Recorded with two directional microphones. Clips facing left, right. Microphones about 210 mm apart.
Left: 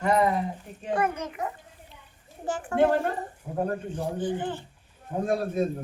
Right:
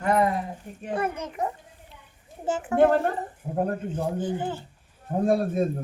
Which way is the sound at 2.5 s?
20° right (ahead or behind).